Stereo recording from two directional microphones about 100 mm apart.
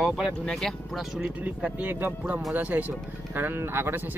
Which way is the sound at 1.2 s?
15° right (ahead or behind).